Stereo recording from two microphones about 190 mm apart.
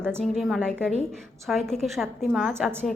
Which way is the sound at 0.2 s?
Centre (ahead or behind).